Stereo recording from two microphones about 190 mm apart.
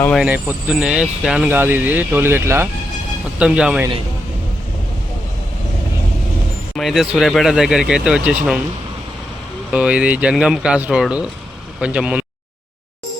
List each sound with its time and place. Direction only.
0.2 s speech: 5° right (ahead or behind)
6.7 s speech: centre (ahead or behind)
9.7 s speech: 5° right (ahead or behind)